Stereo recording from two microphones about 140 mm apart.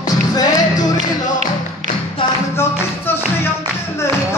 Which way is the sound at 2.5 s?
15° left (ahead or behind).